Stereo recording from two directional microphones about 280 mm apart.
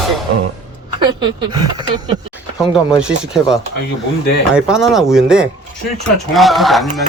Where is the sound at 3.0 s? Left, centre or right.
Centre.